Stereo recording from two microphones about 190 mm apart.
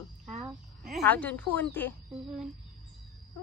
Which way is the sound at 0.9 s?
5° left (ahead or behind).